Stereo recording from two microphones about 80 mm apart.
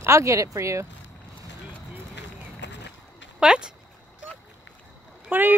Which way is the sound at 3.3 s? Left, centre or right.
Centre.